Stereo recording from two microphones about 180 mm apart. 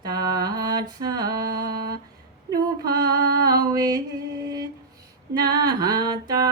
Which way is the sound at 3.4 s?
20° right (ahead or behind).